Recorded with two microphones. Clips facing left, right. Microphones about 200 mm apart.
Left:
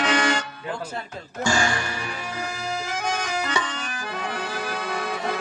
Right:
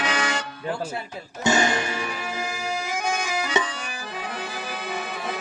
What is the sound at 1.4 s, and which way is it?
Speech, 20° right (ahead or behind).